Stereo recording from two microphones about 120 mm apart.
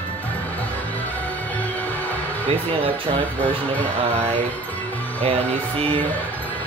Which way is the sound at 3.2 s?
15° left (ahead or behind).